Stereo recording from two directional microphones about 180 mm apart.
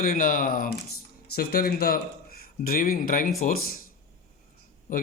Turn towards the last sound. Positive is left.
turn(degrees=50)  # may be behind; listen again after turning